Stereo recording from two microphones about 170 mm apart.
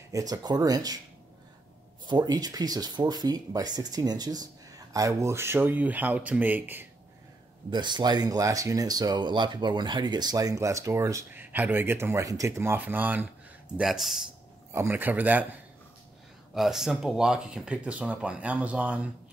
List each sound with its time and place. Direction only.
0.1 s speech: 20° right (ahead or behind)
2.0 s speech: 25° right (ahead or behind)
7.7 s speech: 25° right (ahead or behind); by 14.2 s centre (ahead or behind)
14.7 s speech: 15° right (ahead or behind)
16.5 s speech: centre (ahead or behind)